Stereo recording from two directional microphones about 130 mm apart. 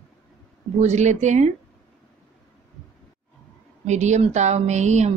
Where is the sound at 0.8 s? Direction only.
65° right (ahead or behind).